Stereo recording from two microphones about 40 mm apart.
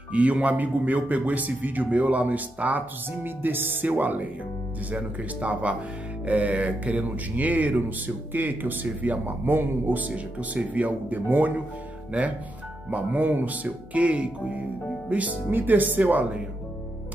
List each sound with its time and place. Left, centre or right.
0.1 s a man's voice: right
3.3 s a man's voice: right
4.9 s a man's voice: right
10.1 s a man's voice: right
12.1 s speech: right
15.5 s a man's voice: right